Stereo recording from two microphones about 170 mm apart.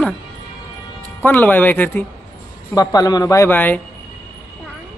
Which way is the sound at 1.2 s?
10° left (ahead or behind).